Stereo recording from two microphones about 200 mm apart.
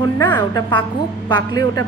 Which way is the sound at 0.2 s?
20° left (ahead or behind).